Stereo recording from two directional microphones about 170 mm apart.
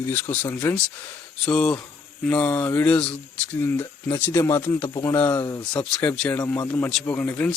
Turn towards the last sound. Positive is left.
turn(degrees=5)  # may be behind; listen again after turning